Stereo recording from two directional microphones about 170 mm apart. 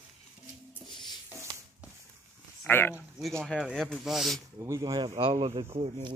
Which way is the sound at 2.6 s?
10° left (ahead or behind).